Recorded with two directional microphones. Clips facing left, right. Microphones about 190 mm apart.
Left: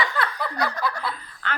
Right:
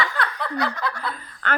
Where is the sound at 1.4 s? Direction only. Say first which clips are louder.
Right 5 dB; 50° right (ahead or behind).